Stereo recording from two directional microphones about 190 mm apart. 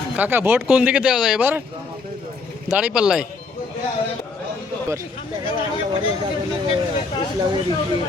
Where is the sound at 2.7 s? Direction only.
5° right (ahead or behind).